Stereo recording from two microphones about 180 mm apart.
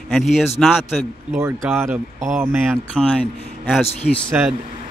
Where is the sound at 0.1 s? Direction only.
Centre (ahead or behind).